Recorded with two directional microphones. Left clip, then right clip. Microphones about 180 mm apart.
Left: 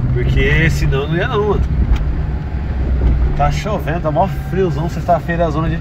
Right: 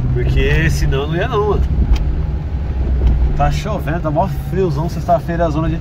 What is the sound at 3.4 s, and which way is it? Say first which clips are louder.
Speech: left 1 dB; 25° right (ahead or behind).